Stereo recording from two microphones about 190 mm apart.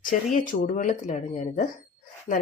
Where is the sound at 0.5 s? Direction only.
45° left (ahead or behind).